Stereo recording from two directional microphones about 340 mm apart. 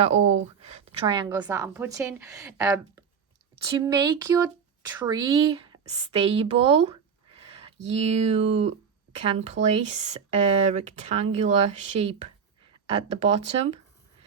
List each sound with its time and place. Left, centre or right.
0.0 s a woman's voice: centre
8.1 s a woman's voice: centre